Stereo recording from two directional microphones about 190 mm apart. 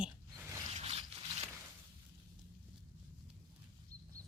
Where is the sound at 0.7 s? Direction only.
30° right (ahead or behind).